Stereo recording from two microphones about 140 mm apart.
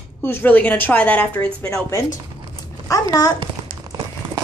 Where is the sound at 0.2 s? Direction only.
15° left (ahead or behind).